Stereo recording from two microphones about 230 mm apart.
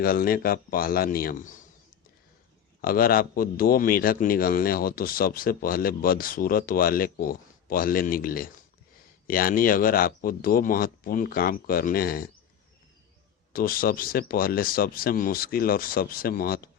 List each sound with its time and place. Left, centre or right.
0.0 s a man's voice: left
2.8 s a man's voice: left
13.5 s a man's voice: left